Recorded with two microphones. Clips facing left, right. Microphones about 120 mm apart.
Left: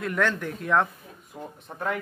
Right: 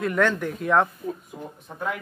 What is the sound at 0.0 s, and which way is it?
Speech, centre (ahead or behind).